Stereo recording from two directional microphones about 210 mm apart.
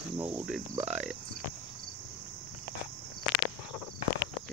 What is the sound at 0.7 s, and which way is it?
Speech, 30° right (ahead or behind).